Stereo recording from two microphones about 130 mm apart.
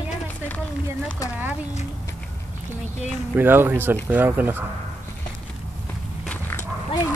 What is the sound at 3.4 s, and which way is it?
Speech, 15° right (ahead or behind).